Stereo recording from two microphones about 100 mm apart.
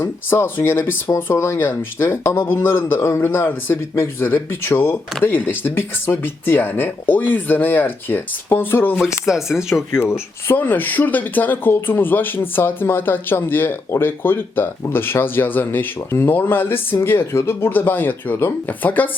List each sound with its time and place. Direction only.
0.0 s speech: 25° left (ahead or behind)
9.2 s speech: 5° right (ahead or behind)
9.9 s speech: 25° left (ahead or behind)